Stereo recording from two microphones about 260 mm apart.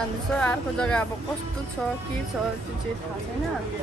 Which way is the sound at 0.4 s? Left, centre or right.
Centre.